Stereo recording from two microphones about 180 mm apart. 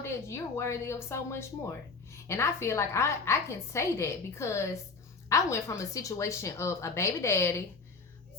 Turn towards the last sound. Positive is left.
turn(degrees=15)  # may be behind; listen again after turning